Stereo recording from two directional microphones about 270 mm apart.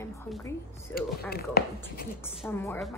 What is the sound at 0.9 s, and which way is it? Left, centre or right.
Speech, left.